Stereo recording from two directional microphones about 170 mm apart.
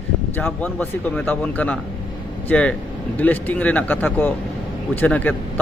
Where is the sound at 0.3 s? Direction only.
10° left (ahead or behind).